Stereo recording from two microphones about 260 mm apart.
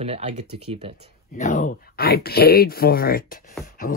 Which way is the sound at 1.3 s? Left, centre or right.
Left.